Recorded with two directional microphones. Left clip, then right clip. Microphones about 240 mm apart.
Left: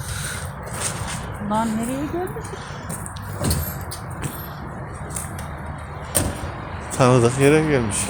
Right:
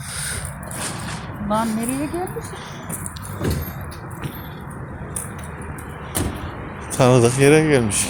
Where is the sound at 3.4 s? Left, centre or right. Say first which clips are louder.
Right 1 dB; left.